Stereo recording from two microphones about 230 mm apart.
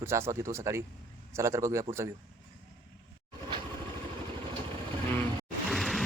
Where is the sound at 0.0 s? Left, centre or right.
Centre.